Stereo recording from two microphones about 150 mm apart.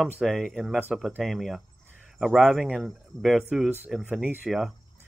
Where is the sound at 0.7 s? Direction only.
10° right (ahead or behind).